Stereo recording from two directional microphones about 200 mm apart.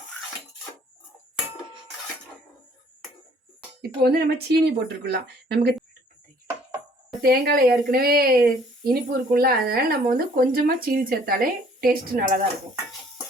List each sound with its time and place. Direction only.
3.8 s speech: 55° right (ahead or behind)
7.2 s speech: 50° right (ahead or behind)